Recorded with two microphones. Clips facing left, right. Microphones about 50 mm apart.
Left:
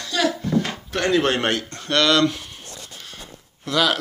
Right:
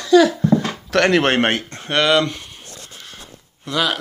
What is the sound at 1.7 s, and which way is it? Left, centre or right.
Speech, right.